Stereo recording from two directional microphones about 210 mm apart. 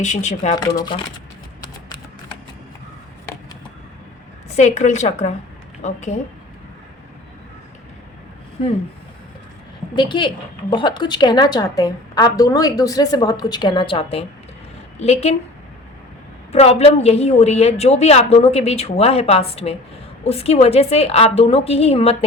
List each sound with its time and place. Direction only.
0.0 s a woman's voice: 35° left (ahead or behind)
0.5 s a woman's voice: 20° left (ahead or behind)
4.5 s a woman's voice: 35° left (ahead or behind)
9.9 s a woman's voice: 20° left (ahead or behind)
16.5 s a woman's voice: 30° left (ahead or behind)